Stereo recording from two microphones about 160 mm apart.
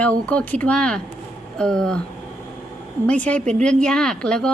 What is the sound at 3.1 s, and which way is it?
Speech, 10° left (ahead or behind).